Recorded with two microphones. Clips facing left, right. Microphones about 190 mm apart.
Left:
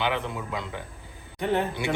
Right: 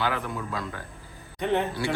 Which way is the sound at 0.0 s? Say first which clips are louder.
Left 1 dB; 25° left (ahead or behind).